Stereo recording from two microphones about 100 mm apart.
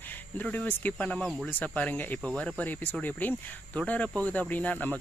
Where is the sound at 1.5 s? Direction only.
15° left (ahead or behind).